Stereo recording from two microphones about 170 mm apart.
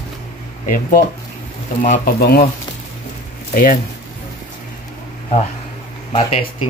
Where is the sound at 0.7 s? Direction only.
55° left (ahead or behind).